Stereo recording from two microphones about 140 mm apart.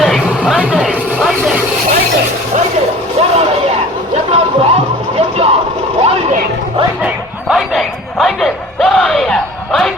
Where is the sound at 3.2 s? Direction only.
50° right (ahead or behind).